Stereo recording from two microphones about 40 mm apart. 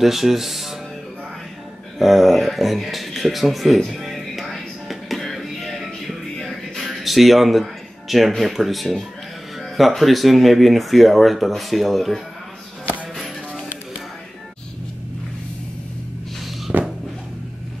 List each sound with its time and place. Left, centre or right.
0.0 s speech: centre
2.0 s speech: centre
3.9 s music: centre
8.4 s speech: centre
16.7 s a sound: right